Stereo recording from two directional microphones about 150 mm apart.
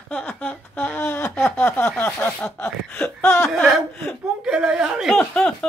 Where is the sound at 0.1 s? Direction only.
10° left (ahead or behind).